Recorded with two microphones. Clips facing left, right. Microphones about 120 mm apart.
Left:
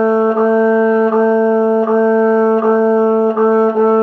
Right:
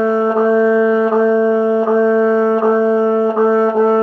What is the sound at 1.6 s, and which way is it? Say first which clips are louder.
Music: left 2 dB; 55° left (ahead or behind).